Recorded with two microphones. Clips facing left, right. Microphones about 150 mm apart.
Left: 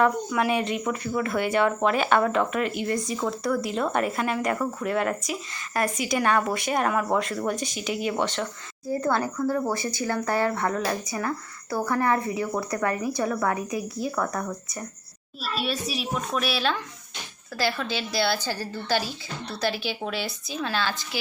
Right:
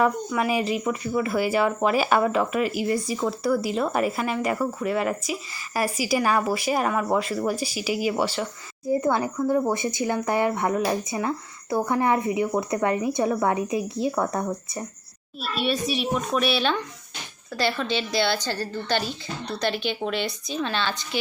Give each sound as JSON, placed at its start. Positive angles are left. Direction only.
{"t": 0.0, "sound": "speech", "side_deg": 0}
{"t": 8.9, "sound": "speech", "side_deg": -20}
{"t": 15.4, "sound": "speech", "side_deg": 0}